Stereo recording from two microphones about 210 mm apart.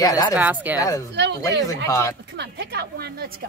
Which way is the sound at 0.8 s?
15° left (ahead or behind).